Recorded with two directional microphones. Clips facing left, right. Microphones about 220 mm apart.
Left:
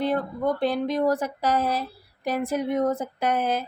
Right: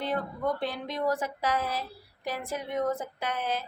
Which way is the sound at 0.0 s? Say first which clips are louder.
Left 6 dB; 40° left (ahead or behind).